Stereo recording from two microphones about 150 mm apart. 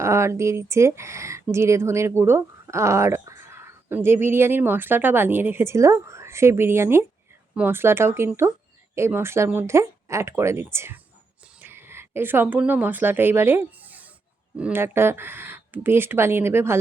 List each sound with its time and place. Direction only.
0.0 s speech: 20° right (ahead or behind)